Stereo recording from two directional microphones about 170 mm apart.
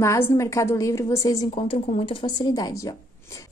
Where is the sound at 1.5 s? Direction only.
35° left (ahead or behind); by 2.9 s 20° left (ahead or behind).